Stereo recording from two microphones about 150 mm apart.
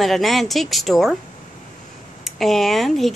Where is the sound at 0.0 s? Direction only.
Centre (ahead or behind).